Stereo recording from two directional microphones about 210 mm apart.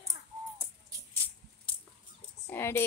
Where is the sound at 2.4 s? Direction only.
10° left (ahead or behind).